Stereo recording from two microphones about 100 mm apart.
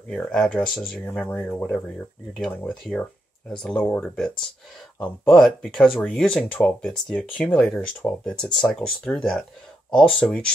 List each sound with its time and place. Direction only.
0.1 s speech: 5° left (ahead or behind)
1.0 s speech: 15° left (ahead or behind)
2.3 s speech: 10° left (ahead or behind)
9.9 s speech: 5° left (ahead or behind)